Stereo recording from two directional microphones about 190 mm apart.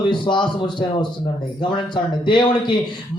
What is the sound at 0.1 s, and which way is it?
Speech, 25° left (ahead or behind).